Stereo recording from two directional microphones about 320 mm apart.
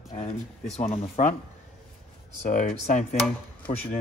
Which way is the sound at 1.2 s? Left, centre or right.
Left.